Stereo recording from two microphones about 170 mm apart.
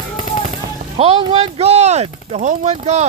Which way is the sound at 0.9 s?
35° right (ahead or behind).